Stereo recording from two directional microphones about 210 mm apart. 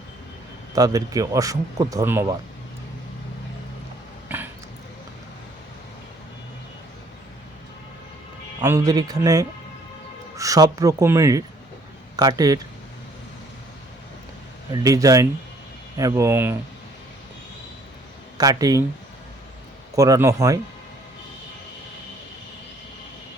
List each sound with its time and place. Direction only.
0.8 s a man's voice: 15° right (ahead or behind)
4.3 s a sound: 10° right (ahead or behind)
8.6 s a man's voice: 15° right (ahead or behind)
14.7 s a man's voice: 15° right (ahead or behind)
18.3 s a man's voice: 15° right (ahead or behind)
20.0 s a man's voice: 15° right (ahead or behind)